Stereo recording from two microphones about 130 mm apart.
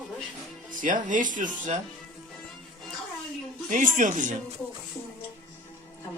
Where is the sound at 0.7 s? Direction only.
90° right.